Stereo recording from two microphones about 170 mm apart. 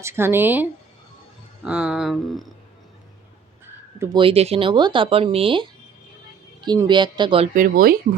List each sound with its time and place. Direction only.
0.0 s speech: 15° right (ahead or behind)
1.6 s a sound: 5° right (ahead or behind)
3.9 s speech: 15° right (ahead or behind)
4.2 s speech: 35° right (ahead or behind)
7.5 s speech: 55° right (ahead or behind)